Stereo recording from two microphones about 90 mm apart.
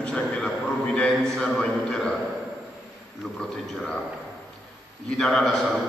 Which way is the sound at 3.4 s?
10° left (ahead or behind).